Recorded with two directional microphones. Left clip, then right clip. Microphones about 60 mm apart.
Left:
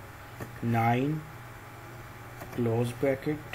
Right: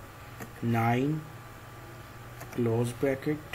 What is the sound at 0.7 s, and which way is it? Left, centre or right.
Speech, centre.